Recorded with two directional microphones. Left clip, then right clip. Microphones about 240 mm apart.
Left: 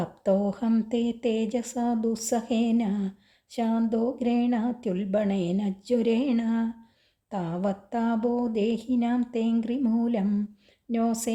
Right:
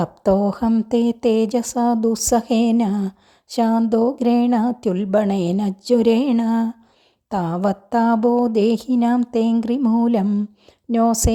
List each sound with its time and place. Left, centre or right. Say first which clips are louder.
0.0 s speech: right 7 dB; right